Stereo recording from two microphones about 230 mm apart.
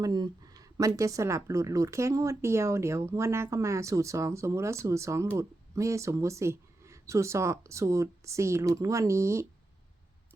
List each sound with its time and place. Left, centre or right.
0.0 s speech: centre